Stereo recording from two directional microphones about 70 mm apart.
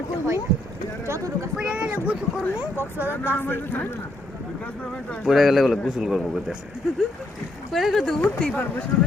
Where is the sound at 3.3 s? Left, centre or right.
Left.